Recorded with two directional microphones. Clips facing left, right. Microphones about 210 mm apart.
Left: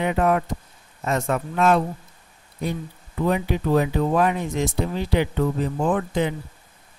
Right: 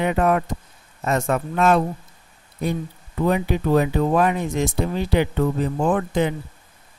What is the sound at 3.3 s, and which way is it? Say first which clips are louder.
Speech: right 2 dB; 50° right (ahead or behind).